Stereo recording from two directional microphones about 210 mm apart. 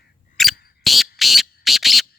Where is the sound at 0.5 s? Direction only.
45° left (ahead or behind).